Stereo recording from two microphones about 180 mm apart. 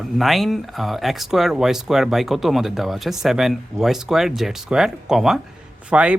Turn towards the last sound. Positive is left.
turn(degrees=-5)  # may be behind; listen again after turning